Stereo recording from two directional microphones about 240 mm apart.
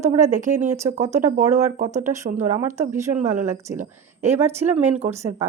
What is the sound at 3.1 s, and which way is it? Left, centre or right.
Speech, right.